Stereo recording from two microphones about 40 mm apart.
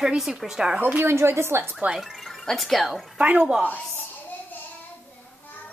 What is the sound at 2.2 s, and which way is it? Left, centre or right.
Speech, centre.